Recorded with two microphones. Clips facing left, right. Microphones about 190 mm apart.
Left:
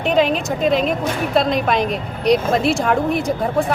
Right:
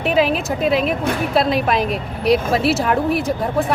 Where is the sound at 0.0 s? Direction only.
5° right (ahead or behind).